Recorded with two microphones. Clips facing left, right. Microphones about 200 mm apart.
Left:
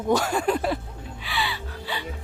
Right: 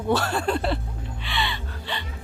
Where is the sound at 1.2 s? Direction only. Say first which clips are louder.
Even; 5° left (ahead or behind).